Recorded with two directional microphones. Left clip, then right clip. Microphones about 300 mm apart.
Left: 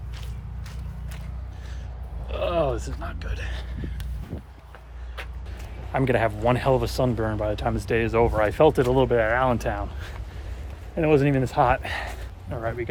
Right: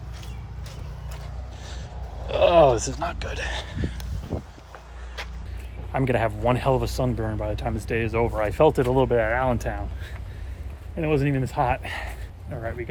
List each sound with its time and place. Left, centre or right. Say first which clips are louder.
2.2 s speech: right 8 dB; centre
5.9 s speech: left 1 dB; centre